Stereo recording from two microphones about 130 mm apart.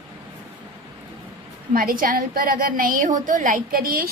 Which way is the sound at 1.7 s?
90° right.